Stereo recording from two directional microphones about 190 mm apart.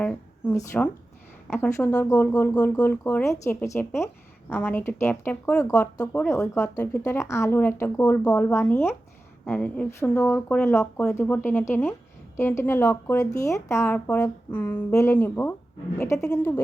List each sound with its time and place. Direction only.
0.0 s a woman's voice: 10° left (ahead or behind)